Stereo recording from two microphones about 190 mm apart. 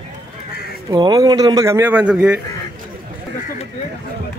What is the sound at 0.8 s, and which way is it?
A man's voice, 20° right (ahead or behind).